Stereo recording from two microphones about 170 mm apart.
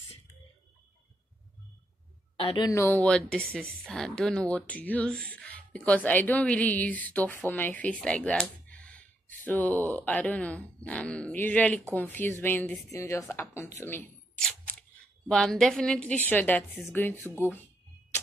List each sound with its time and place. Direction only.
2.3 s a woman's voice: 30° left (ahead or behind)
2.7 s speech: 15° left (ahead or behind)